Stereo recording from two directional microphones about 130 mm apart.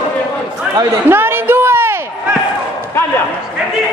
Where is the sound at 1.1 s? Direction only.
15° right (ahead or behind).